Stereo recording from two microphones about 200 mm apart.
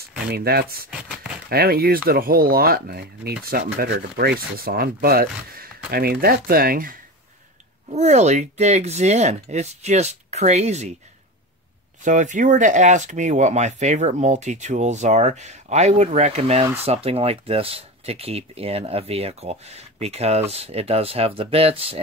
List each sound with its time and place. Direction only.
0.3 s speech: 50° right (ahead or behind)
7.9 s speech: 35° right (ahead or behind)
12.0 s speech: 40° right (ahead or behind)